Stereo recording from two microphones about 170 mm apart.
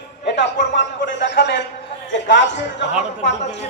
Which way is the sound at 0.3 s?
90° left.